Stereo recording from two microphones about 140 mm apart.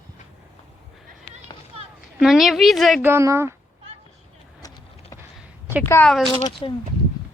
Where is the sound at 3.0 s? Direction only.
15° right (ahead or behind).